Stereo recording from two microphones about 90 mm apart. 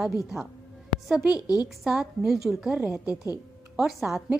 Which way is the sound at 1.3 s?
45° left (ahead or behind).